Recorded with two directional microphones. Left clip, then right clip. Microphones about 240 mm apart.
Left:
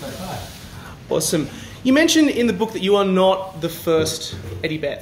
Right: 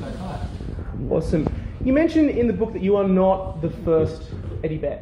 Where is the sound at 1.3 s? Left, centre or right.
Left.